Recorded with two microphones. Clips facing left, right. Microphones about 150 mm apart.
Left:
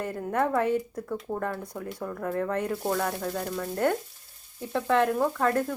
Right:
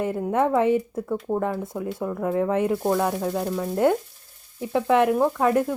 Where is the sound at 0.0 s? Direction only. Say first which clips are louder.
Right 5 dB; 15° right (ahead or behind).